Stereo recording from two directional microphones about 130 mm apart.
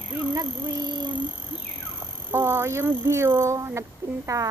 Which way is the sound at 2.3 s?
20° right (ahead or behind).